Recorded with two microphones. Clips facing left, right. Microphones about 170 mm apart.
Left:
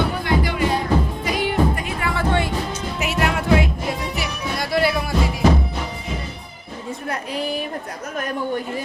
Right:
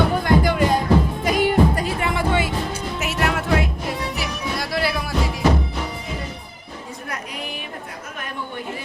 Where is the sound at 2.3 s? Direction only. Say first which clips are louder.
Even; 5° right (ahead or behind).